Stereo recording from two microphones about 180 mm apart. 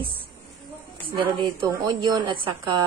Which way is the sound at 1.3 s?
20° right (ahead or behind).